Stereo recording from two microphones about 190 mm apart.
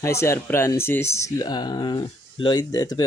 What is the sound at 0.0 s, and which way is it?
Speech, 15° left (ahead or behind).